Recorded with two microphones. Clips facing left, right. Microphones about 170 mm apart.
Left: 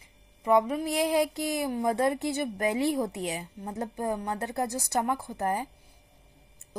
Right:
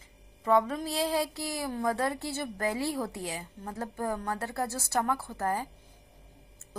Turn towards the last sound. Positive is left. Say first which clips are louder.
# left 2 dB
turn(degrees=20)  # may be behind; listen again after turning